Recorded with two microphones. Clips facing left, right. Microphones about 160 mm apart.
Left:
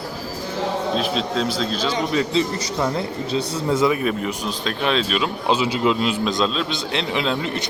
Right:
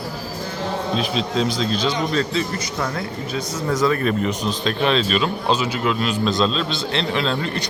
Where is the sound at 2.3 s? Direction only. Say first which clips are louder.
Left 3 dB; 25° left (ahead or behind).